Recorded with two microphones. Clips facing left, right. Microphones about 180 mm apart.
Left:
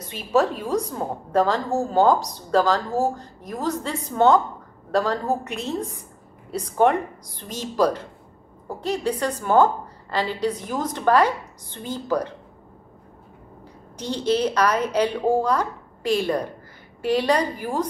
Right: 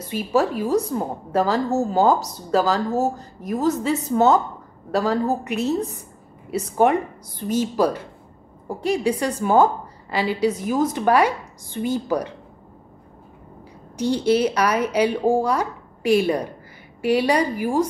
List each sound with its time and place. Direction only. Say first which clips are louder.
0.1 s a woman's voice: even; 5° right (ahead or behind)
13.9 s speech: right 4 dB; 10° right (ahead or behind)